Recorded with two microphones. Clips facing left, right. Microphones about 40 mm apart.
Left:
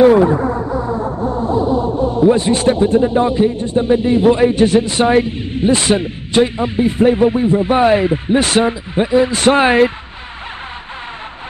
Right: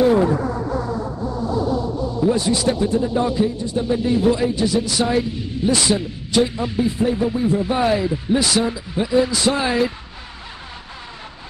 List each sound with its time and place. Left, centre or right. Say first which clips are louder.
0.2 s music: left 5 dB; left
0.9 s music: left 6 dB; left
2.3 s a man's voice: left 5 dB; left
9.4 s a man's voice: left 8 dB; left